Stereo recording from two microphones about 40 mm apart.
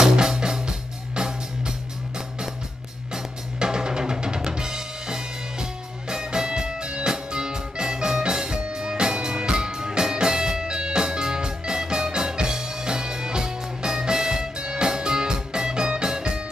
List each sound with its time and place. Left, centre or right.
0.0 s music: centre